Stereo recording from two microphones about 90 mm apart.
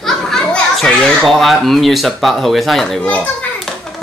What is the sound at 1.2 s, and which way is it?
Speech, centre (ahead or behind).